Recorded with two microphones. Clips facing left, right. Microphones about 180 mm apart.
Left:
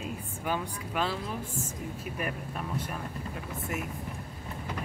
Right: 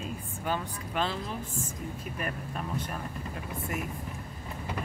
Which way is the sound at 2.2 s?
5° left (ahead or behind).